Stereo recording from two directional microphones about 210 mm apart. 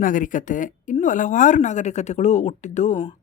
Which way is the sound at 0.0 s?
40° left (ahead or behind).